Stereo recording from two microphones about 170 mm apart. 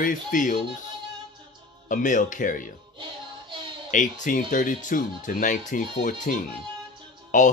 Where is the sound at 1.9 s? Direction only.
50° left (ahead or behind).